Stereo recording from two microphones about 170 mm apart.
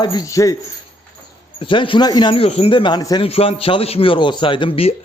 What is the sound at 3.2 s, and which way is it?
A man's voice, 35° left (ahead or behind).